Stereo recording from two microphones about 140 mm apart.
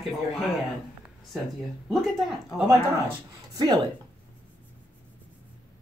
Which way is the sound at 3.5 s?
30° right (ahead or behind).